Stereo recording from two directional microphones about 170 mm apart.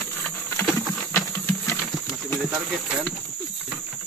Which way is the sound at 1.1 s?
15° left (ahead or behind).